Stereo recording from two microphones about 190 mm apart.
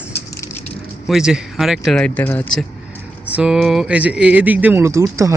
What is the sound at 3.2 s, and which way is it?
Speech, 5° right (ahead or behind).